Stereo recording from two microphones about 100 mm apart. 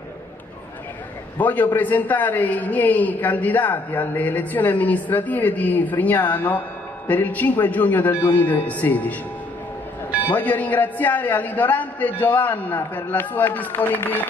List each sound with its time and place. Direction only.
1.4 s a woman's voice: 15° left (ahead or behind)
10.3 s a woman's voice: 15° left (ahead or behind)